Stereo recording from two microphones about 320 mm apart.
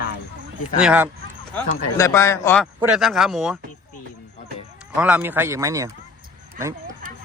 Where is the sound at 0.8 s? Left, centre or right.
Centre.